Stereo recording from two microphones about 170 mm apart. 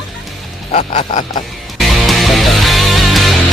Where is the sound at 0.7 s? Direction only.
40° left (ahead or behind).